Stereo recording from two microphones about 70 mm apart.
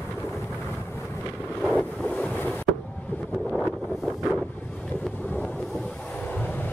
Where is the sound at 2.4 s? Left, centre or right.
Left.